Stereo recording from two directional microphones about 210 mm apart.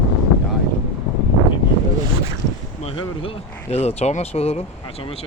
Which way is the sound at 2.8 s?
25° left (ahead or behind).